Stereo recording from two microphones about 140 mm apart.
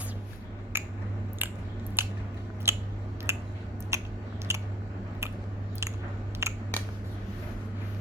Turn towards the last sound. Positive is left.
turn(degrees=-20)  # may be behind; listen again after turning